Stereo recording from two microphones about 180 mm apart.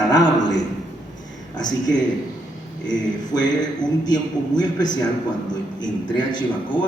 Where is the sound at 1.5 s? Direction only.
20° left (ahead or behind).